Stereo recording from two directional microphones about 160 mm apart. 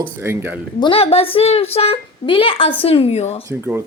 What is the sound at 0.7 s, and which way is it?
A woman's voice, 35° left (ahead or behind).